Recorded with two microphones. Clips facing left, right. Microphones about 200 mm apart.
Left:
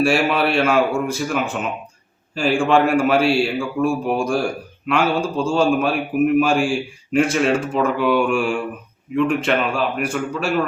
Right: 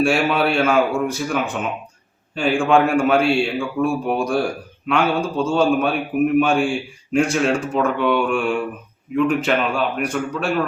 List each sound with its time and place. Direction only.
0.0 s a man's voice: centre (ahead or behind)